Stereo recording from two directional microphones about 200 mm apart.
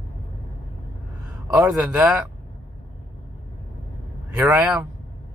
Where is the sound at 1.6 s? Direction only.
5° right (ahead or behind).